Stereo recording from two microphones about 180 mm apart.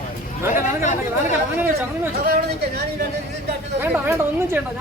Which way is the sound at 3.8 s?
10° right (ahead or behind).